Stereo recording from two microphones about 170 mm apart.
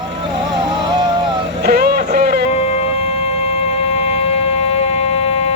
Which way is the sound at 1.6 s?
65° right (ahead or behind).